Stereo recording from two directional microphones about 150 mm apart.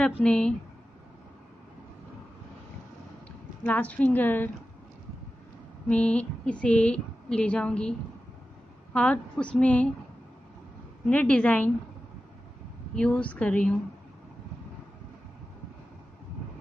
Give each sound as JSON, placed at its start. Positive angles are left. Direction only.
{"t": 0.0, "sound": "a woman's voice", "side_deg": 5}
{"t": 3.6, "sound": "a woman's voice", "side_deg": 10}
{"t": 5.9, "sound": "a woman's voice", "side_deg": 10}
{"t": 8.9, "sound": "a woman's voice", "side_deg": 10}
{"t": 11.1, "sound": "a woman's voice", "side_deg": 10}
{"t": 12.9, "sound": "a woman's voice", "side_deg": 5}